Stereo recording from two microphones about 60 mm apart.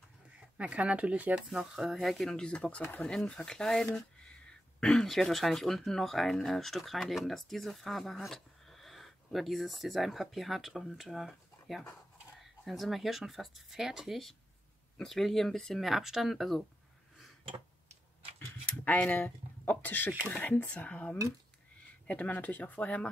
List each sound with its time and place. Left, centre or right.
0.6 s speech: right
1.3 s speech: centre; by 3.1 s left
3.1 s speech: centre
18.7 s speech: left